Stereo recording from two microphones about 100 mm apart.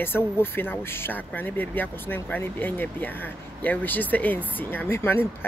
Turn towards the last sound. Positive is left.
turn(degrees=20)  # may be behind; listen again after turning